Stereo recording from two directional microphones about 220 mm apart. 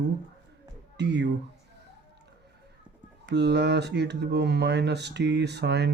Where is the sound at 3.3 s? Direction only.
50° right (ahead or behind).